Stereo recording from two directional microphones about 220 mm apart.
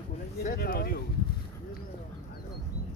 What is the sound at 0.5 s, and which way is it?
Speech, 45° left (ahead or behind).